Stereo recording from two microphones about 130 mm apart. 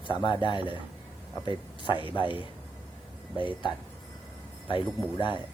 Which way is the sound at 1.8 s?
40° left (ahead or behind).